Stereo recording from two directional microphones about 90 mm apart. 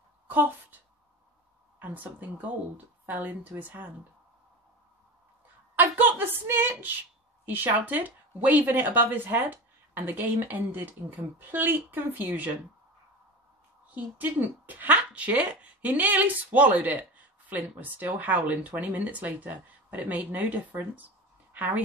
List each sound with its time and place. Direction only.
0.3 s a woman's voice: 20° right (ahead or behind)
1.8 s speech: 20° right (ahead or behind)
5.8 s a woman's voice: 20° right (ahead or behind)
13.9 s a woman's voice: 20° right (ahead or behind)